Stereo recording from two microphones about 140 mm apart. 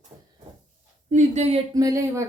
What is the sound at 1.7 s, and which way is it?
Speech, 25° right (ahead or behind).